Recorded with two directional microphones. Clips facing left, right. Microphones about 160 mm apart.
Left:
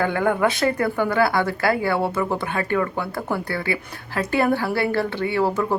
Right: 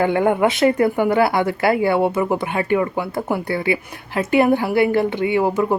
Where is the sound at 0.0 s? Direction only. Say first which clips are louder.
Right 4 dB; 20° right (ahead or behind).